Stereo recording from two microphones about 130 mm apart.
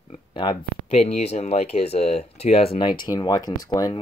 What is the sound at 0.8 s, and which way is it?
Speech, 55° left (ahead or behind).